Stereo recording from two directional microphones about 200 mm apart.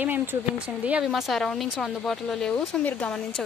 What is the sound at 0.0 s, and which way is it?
A woman's voice, 10° right (ahead or behind).